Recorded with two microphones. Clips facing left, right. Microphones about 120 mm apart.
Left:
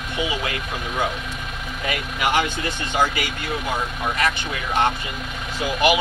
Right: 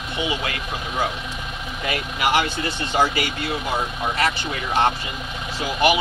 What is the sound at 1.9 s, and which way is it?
Speech, 35° right (ahead or behind).